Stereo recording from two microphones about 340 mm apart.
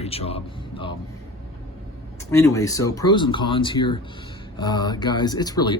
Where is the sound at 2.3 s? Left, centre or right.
Centre.